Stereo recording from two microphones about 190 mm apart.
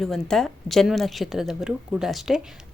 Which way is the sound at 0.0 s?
Centre (ahead or behind).